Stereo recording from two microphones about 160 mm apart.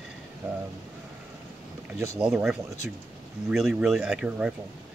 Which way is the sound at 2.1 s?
5° right (ahead or behind).